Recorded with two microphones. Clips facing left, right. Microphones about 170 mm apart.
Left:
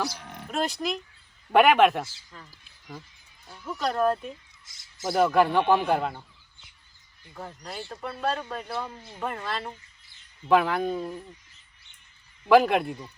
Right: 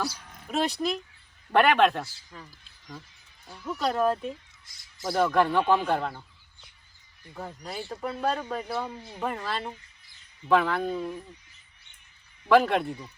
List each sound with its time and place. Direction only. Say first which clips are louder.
0.2 s livestock: left 8 dB; 70° left (ahead or behind)
0.5 s speech: right 1 dB; centre (ahead or behind)
1.5 s speech: left 2 dB; 10° left (ahead or behind)
3.5 s speech: right 1 dB; 5° right (ahead or behind); by 6.2 s 10° left (ahead or behind)
7.3 s speech: right 1 dB; 5° right (ahead or behind)
12.5 s speech: left 2 dB; 10° left (ahead or behind)